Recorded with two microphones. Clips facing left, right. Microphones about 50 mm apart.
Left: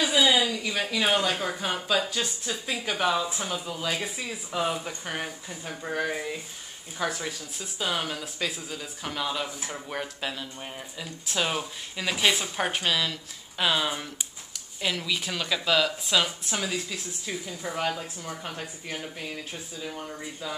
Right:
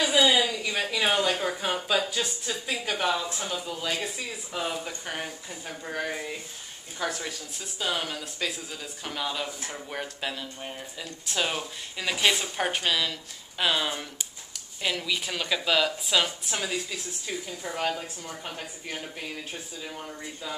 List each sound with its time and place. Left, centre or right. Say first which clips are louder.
0.0 s a sound: right 1 dB; centre
0.5 s speech: even; centre
19.9 s speech: left 2 dB; centre